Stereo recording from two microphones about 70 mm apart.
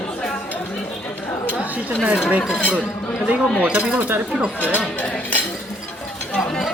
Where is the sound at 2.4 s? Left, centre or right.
Centre; by 4.2 s right.